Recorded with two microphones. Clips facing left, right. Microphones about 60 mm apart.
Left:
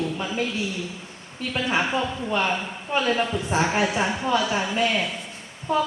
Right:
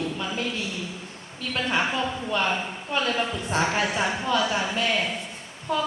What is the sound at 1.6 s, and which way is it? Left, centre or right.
A woman's voice, centre.